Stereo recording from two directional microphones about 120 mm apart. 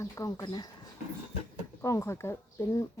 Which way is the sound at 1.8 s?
25° left (ahead or behind).